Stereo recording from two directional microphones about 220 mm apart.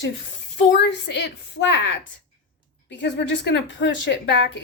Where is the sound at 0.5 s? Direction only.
50° left (ahead or behind).